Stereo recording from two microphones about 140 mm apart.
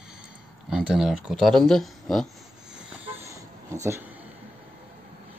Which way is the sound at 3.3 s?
20° right (ahead or behind).